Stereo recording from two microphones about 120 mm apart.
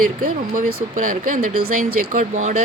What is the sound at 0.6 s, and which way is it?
Speech, 90° right.